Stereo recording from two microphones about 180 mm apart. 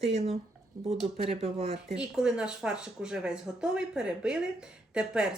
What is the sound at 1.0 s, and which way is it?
Speech, 35° right (ahead or behind).